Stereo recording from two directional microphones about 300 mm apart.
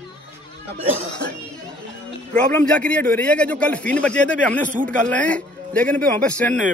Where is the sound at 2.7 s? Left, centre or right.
Centre.